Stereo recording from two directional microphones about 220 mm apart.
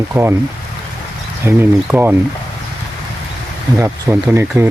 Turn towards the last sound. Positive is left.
turn(degrees=-10)  # may be behind; listen again after turning